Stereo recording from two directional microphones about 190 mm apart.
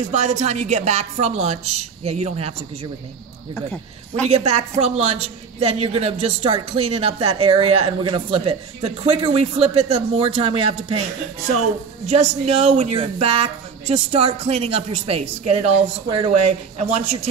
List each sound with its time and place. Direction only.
0.1 s a woman's voice: 40° right (ahead or behind)
4.1 s a woman's voice: 35° right (ahead or behind)
12.1 s a woman's voice: 35° right (ahead or behind)